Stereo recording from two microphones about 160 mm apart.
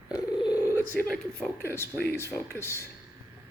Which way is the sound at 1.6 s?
15° left (ahead or behind).